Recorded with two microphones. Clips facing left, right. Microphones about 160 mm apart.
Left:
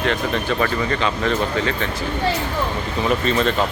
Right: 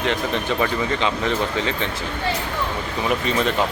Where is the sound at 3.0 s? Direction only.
15° right (ahead or behind).